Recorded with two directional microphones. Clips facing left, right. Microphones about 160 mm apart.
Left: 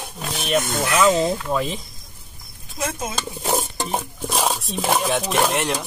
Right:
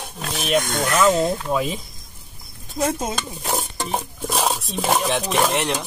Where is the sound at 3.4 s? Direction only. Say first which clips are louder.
Left 4 dB; 20° left (ahead or behind).